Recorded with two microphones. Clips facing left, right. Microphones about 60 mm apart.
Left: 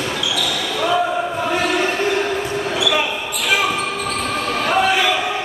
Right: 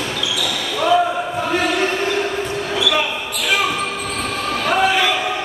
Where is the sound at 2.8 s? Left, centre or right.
Centre.